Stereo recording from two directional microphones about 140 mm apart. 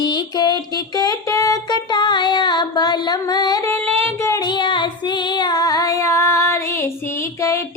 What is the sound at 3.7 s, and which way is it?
Music, 15° left (ahead or behind).